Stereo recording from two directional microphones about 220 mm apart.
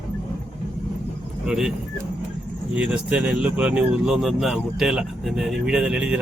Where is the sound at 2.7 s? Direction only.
5° right (ahead or behind).